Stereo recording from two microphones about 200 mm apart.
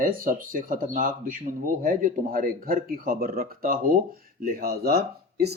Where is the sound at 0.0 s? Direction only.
45° right (ahead or behind).